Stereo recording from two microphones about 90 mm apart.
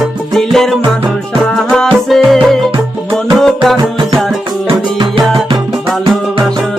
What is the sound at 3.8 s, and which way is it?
Music, 55° right (ahead or behind).